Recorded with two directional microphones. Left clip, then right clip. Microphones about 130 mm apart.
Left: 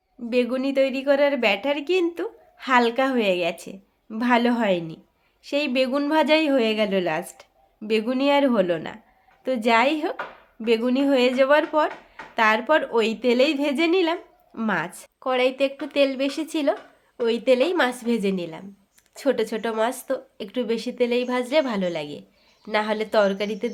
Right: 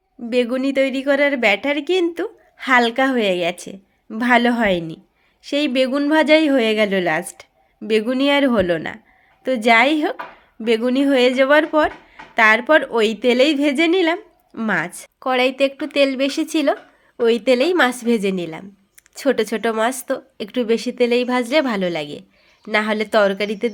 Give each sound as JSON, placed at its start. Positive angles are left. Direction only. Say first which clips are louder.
{"t": 0.3, "sound": "a woman's voice", "louder": "right 4 dB", "side_deg": -30}